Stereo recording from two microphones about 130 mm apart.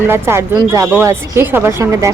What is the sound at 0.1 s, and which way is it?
A woman's voice, 20° right (ahead or behind).